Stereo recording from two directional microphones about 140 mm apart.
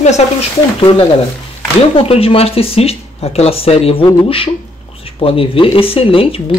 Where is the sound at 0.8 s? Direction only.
35° left (ahead or behind).